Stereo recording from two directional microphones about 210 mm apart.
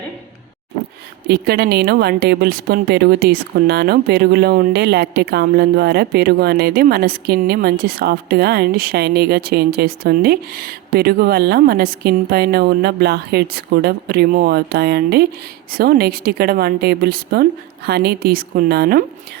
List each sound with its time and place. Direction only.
1.3 s speech: 50° right (ahead or behind)